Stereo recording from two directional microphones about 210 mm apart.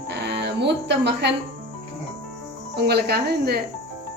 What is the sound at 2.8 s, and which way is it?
Speech, 50° right (ahead or behind).